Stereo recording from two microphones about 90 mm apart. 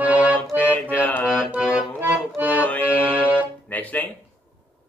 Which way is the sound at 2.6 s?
20° left (ahead or behind).